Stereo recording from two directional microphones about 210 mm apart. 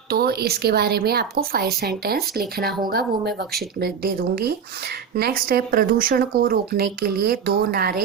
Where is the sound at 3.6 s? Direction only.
50° right (ahead or behind).